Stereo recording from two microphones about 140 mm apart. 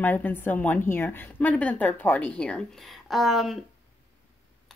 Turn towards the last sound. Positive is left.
turn(degrees=0)  # may be behind; listen again after turning